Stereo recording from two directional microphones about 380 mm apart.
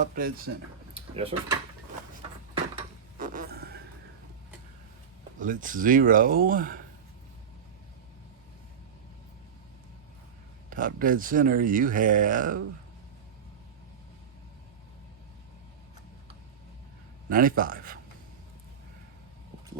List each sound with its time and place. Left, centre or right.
0.0 s speech: right
3.2 s a sound: right
5.4 s speech: right
10.7 s speech: right
17.2 s a man's voice: right